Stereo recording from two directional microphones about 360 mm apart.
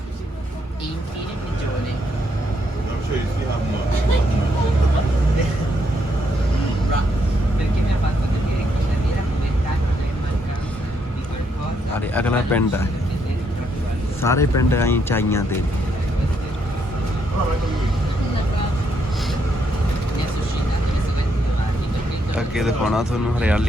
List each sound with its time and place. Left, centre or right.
11.9 s a sound: centre
14.2 s speech: centre
22.4 s speech: centre